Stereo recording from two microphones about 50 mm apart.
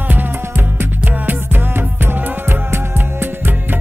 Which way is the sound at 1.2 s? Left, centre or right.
Right.